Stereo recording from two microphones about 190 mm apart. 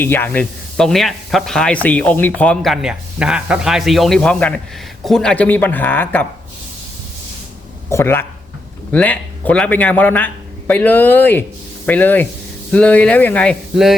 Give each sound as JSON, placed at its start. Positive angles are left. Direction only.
{"t": 0.0, "sound": "a man's voice", "side_deg": 10}
{"t": 7.9, "sound": "a man's voice", "side_deg": 15}